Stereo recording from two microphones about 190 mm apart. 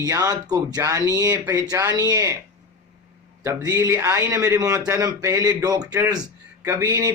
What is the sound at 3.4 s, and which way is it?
A man's voice, 15° right (ahead or behind).